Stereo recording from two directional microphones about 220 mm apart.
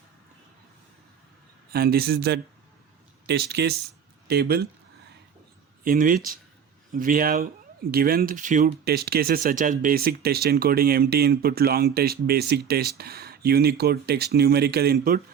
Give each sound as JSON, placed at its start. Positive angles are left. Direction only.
{"t": 1.7, "sound": "speech", "side_deg": -45}
{"t": 5.8, "sound": "speech", "side_deg": -40}